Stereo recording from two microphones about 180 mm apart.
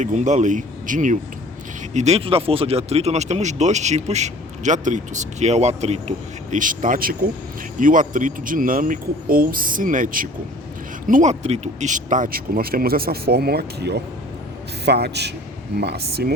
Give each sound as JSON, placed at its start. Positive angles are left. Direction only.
{"t": 0.0, "sound": "a man's voice", "side_deg": -40}